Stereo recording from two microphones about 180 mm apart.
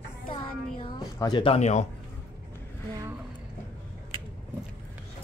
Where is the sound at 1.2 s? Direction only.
25° left (ahead or behind).